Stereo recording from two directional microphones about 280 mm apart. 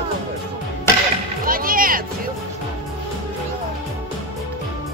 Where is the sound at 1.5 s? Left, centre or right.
Right.